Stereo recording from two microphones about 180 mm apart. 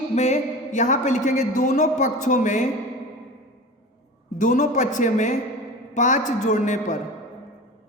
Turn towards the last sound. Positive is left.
turn(degrees=45)  # may be behind; listen again after turning